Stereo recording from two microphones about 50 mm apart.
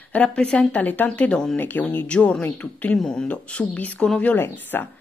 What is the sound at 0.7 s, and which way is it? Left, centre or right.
A woman's voice, left.